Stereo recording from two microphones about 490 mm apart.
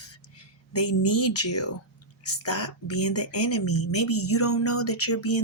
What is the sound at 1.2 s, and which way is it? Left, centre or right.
Speech, left.